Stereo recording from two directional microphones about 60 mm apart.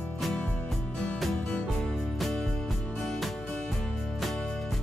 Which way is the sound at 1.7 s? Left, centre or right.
Centre.